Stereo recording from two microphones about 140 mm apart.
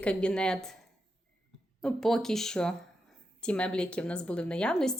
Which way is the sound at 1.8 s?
5° left (ahead or behind).